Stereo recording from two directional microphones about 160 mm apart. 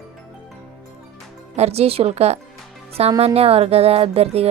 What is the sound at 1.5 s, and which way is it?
Speech, 40° right (ahead or behind).